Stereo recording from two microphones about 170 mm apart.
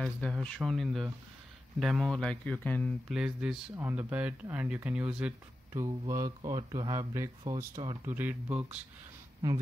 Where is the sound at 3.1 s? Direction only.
5° right (ahead or behind).